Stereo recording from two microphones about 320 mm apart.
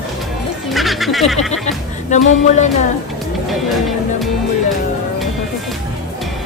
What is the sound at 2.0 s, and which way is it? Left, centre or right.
Speech, left.